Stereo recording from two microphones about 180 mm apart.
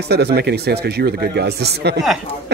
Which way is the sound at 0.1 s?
65° right (ahead or behind).